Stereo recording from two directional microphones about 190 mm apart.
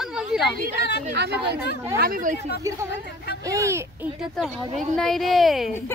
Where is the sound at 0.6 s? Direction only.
60° left (ahead or behind).